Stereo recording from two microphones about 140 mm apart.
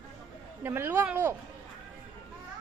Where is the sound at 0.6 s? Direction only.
15° right (ahead or behind).